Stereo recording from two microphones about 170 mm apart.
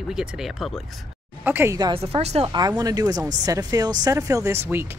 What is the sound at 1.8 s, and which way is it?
Speech, 30° right (ahead or behind).